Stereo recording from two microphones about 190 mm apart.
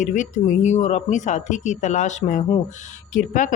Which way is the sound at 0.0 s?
40° left (ahead or behind).